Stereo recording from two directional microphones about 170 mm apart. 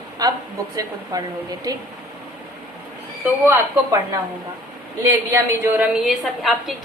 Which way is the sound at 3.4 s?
15° right (ahead or behind).